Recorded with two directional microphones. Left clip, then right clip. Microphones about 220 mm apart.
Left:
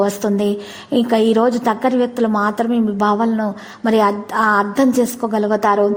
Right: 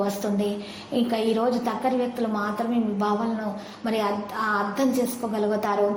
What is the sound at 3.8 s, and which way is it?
A woman's voice, 40° left (ahead or behind).